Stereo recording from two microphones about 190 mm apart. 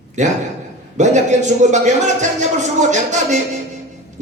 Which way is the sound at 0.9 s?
40° right (ahead or behind).